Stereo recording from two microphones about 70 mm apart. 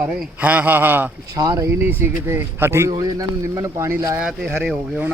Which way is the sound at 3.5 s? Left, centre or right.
Right.